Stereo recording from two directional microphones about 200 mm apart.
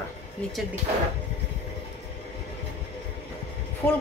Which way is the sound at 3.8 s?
10° left (ahead or behind).